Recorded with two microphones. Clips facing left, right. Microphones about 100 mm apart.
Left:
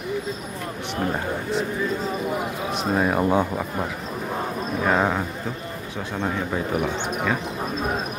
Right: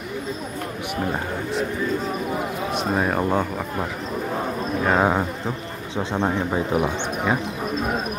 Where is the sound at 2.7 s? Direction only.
Centre (ahead or behind).